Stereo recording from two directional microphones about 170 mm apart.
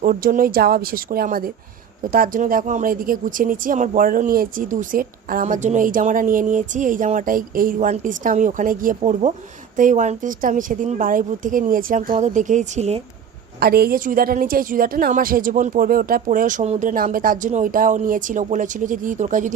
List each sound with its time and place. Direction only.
0.0 s speech: 55° right (ahead or behind)
13.6 s speech: 65° right (ahead or behind); by 19.5 s 45° right (ahead or behind)